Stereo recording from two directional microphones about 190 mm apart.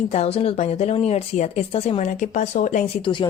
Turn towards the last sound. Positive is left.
turn(degrees=25)  # may be behind; listen again after turning